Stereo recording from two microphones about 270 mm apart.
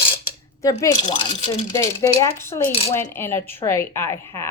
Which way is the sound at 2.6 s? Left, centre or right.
Left.